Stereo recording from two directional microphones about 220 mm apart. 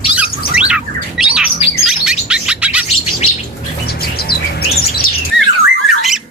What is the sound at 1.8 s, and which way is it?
Chirp, centre (ahead or behind).